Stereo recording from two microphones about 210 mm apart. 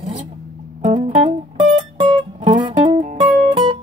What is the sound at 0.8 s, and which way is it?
Music, 25° right (ahead or behind).